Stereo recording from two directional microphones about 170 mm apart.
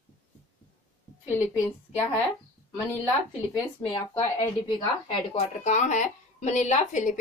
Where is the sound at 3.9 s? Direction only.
25° left (ahead or behind).